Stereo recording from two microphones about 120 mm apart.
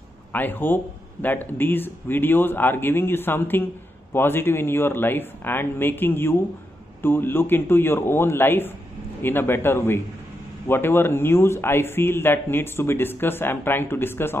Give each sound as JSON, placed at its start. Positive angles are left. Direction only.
{"t": 0.3, "sound": "a man's voice", "side_deg": 15}